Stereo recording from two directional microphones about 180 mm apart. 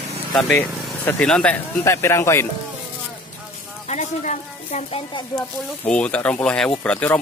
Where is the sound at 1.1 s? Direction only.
5° left (ahead or behind).